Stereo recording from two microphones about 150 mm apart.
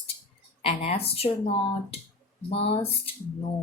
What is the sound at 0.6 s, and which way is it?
Speech, 45° left (ahead or behind).